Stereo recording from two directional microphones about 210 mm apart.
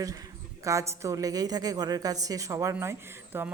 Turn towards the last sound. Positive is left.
turn(degrees=-10)  # may be behind; listen again after turning